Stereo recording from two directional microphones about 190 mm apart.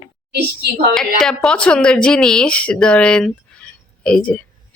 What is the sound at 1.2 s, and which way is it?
Speech, 5° left (ahead or behind).